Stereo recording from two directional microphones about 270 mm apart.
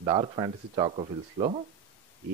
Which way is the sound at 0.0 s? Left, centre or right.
Centre.